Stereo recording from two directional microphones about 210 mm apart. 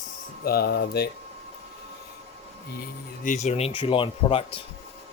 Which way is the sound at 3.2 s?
35° left (ahead or behind).